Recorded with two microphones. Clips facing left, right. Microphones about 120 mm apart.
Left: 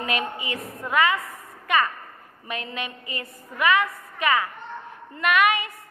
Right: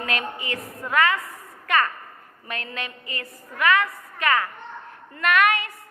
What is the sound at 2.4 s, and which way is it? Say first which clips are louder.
A woman's voice: left 1 dB; 15° left (ahead or behind).